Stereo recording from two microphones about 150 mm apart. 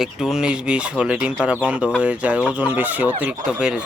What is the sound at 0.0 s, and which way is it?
Speech, 5° right (ahead or behind).